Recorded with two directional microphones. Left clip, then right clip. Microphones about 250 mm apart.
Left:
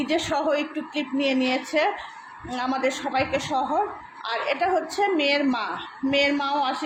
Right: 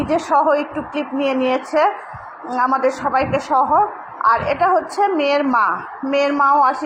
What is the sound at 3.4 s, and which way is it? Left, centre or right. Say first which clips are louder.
Speech: right 9 dB; centre.